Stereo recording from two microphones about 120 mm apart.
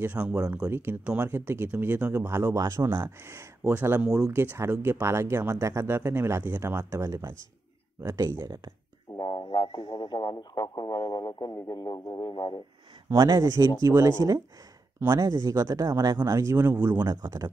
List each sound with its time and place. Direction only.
0.0 s speech: 10° right (ahead or behind)
2.1 s speech: 25° right (ahead or behind)
9.1 s speech: 35° left (ahead or behind)
13.1 s speech: 30° right (ahead or behind); by 17.0 s 15° right (ahead or behind)
17.0 s speech: 35° right (ahead or behind)